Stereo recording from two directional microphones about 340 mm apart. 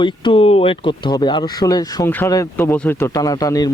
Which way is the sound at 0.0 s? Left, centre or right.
Centre.